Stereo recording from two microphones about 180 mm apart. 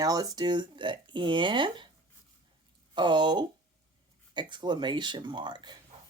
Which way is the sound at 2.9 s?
25° right (ahead or behind).